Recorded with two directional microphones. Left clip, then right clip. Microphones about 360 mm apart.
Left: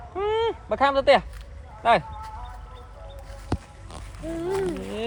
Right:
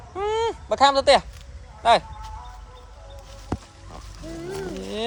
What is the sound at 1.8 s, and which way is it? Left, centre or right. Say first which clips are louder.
Speech: right 2 dB; centre.